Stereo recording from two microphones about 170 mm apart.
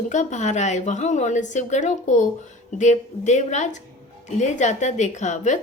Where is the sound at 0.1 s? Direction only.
45° left (ahead or behind).